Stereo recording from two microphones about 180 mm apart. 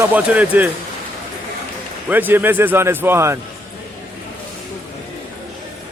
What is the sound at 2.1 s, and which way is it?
Speech, 10° right (ahead or behind).